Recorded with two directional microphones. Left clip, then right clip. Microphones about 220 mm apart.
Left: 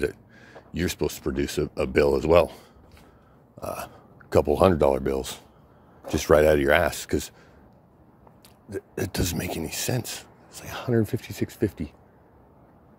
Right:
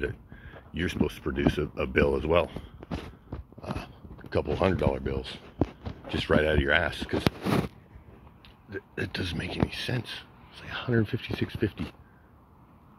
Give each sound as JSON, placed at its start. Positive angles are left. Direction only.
{"t": 0.0, "sound": "speech", "side_deg": 35}
{"t": 3.7, "sound": "speech", "side_deg": 50}
{"t": 8.6, "sound": "speech", "side_deg": 35}